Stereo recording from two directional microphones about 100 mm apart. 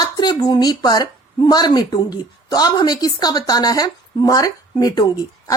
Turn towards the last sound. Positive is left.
turn(degrees=40)  # may be behind; listen again after turning